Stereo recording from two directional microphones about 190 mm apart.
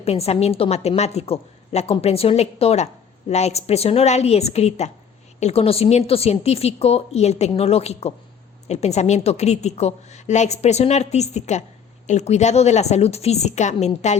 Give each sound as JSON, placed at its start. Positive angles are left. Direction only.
{"t": 0.0, "sound": "a woman's voice", "side_deg": 35}